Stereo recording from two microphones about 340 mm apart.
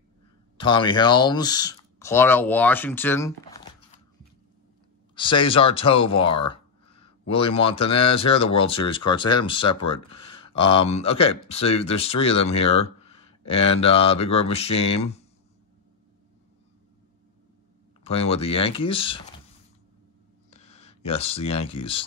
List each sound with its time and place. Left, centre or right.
0.6 s speech: centre
5.1 s speech: centre
13.0 s a sound: centre
13.5 s speech: centre
18.0 s speech: centre
20.4 s a sound: centre